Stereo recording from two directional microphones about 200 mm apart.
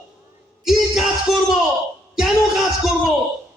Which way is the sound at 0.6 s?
Centre (ahead or behind).